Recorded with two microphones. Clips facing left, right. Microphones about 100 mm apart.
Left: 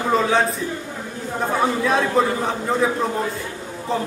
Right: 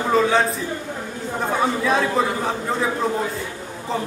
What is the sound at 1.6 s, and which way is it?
A man's voice, centre (ahead or behind).